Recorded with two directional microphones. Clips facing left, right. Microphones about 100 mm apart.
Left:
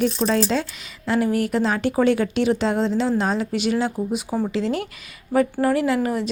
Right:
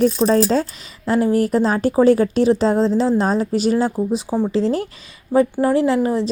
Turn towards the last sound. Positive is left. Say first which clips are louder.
# right 4 dB
turn(degrees=-30)  # may be behind; listen again after turning